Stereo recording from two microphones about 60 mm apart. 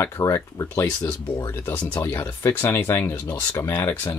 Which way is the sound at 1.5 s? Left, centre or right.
Left.